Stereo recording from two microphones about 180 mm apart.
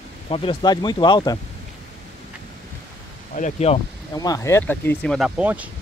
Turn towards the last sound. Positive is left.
turn(degrees=-10)  # may be behind; listen again after turning